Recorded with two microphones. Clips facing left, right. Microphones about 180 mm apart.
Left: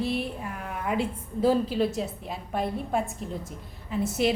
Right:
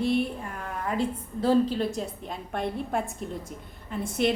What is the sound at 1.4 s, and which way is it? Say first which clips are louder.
A woman's voice: even; 5° left (ahead or behind).